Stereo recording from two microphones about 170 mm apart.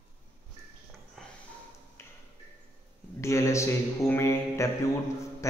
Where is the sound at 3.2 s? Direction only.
15° left (ahead or behind).